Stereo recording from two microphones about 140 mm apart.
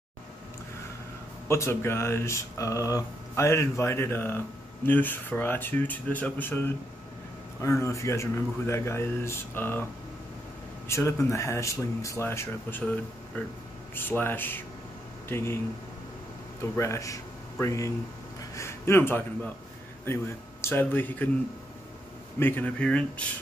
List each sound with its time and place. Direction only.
1.5 s speech: 20° left (ahead or behind)
10.9 s speech: 20° left (ahead or behind)
16.7 s a man's voice: 20° left (ahead or behind)
22.4 s speech: 15° left (ahead or behind)